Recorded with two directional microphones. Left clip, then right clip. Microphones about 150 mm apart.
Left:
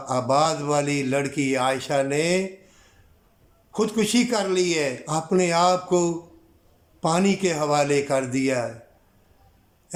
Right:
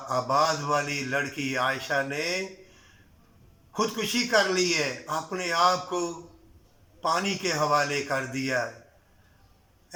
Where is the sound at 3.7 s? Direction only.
30° left (ahead or behind).